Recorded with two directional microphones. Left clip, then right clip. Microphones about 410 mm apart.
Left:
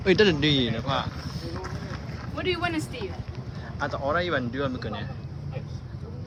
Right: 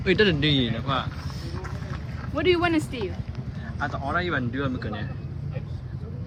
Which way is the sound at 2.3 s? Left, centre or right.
Centre.